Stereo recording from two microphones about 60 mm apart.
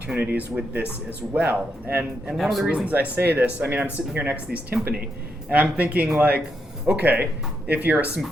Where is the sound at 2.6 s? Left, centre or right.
Right.